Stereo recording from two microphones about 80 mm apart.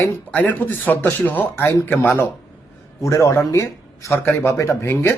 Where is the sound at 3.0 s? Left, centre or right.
Left.